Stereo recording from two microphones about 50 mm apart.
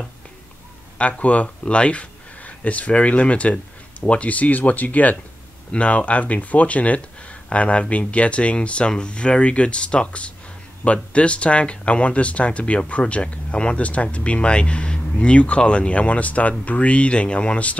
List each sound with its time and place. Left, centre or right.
0.9 s speech: left